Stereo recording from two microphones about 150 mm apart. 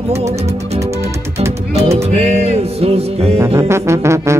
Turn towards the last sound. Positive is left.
turn(degrees=-20)  # may be behind; listen again after turning